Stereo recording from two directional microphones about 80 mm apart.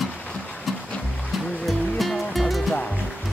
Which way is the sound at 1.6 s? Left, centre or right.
Centre.